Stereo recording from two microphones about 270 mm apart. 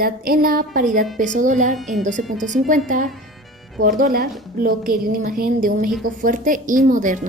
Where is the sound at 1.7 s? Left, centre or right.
Centre.